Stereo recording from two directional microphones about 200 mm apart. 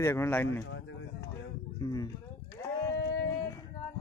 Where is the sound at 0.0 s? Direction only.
10° left (ahead or behind).